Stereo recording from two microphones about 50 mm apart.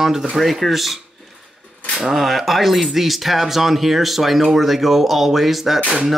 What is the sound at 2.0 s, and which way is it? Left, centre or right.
Speech, centre.